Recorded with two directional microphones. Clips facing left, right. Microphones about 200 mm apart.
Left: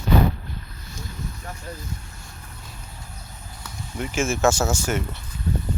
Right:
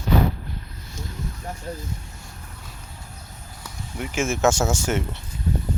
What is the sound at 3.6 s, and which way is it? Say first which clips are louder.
Speech: left 1 dB; 15° right (ahead or behind).